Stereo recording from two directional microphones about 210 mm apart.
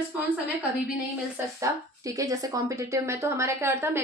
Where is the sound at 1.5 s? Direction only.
15° right (ahead or behind).